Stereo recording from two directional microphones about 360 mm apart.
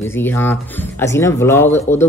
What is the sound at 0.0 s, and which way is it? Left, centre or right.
Speech, centre.